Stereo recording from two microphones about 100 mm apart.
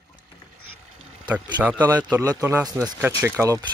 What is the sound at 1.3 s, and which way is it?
Speech, 15° right (ahead or behind).